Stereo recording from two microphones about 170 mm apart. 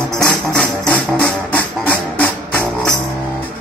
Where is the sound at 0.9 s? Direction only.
10° left (ahead or behind).